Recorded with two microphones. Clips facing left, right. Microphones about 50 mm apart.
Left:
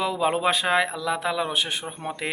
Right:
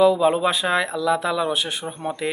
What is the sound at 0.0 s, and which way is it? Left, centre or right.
Speech, left.